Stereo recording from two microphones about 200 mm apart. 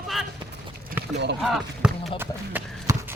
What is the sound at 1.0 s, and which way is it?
Clip-clop, 10° right (ahead or behind).